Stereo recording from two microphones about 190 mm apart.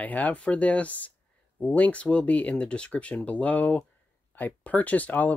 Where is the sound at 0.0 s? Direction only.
10° left (ahead or behind).